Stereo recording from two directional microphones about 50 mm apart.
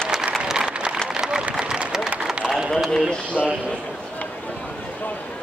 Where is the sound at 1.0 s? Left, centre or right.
Centre.